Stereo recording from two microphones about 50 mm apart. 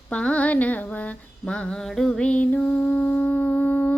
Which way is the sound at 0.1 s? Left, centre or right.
Left.